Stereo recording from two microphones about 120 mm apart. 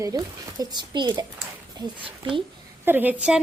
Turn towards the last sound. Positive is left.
turn(degrees=-10)  # may be behind; listen again after turning